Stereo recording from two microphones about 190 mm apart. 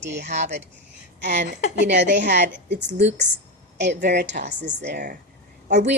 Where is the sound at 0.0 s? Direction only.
65° right (ahead or behind).